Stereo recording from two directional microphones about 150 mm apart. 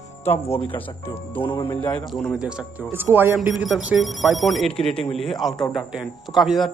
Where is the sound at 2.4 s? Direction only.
5° right (ahead or behind).